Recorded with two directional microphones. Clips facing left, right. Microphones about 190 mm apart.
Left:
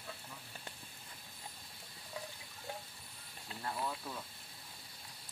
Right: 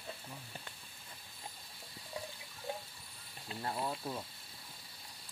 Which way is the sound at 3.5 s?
30° right (ahead or behind).